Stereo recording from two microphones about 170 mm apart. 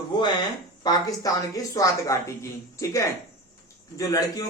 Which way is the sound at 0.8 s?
20° left (ahead or behind).